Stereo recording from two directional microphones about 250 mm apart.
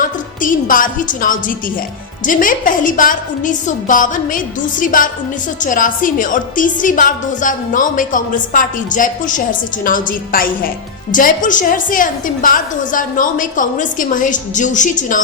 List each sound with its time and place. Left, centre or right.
0.0 s a woman's voice: left